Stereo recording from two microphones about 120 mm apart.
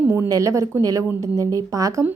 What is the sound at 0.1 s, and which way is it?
A woman's voice, 25° right (ahead or behind).